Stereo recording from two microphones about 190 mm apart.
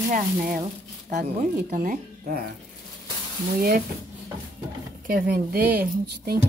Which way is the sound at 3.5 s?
50° right (ahead or behind).